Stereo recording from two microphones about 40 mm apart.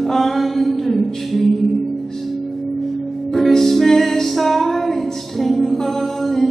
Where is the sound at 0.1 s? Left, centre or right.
Centre.